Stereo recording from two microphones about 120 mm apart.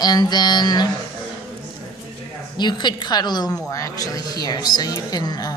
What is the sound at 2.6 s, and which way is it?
A woman's voice, 40° left (ahead or behind).